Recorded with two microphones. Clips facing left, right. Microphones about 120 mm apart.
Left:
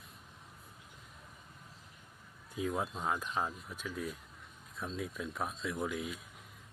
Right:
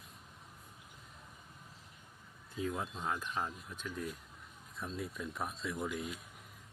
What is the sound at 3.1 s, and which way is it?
Speech, 15° left (ahead or behind).